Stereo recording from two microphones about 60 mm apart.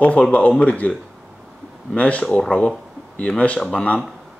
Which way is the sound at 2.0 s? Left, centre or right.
Left.